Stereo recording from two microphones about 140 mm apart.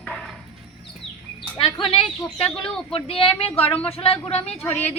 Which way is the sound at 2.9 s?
40° left (ahead or behind).